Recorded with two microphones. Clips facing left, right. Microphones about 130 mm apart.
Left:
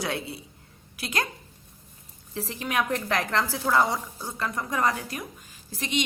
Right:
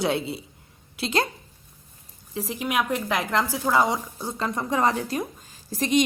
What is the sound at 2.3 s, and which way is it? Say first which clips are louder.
A woman's voice: right 3 dB; 15° right (ahead or behind).